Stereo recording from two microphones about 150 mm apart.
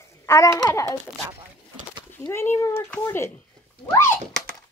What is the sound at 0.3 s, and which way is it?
Speech, 20° left (ahead or behind).